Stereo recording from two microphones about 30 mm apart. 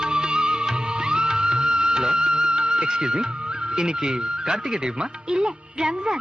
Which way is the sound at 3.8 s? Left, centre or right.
Right.